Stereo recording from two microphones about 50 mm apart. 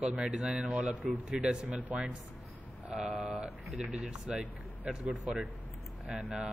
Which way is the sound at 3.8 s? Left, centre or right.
Centre.